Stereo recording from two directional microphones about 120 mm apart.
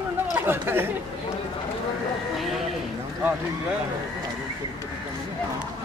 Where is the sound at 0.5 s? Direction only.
20° right (ahead or behind).